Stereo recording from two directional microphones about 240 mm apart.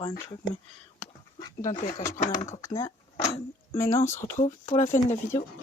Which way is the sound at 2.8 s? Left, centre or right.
Centre.